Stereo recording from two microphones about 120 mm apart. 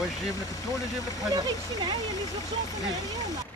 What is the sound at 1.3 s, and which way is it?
Speech, 40° right (ahead or behind).